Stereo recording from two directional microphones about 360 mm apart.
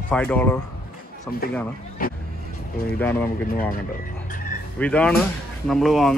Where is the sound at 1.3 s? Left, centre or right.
Left.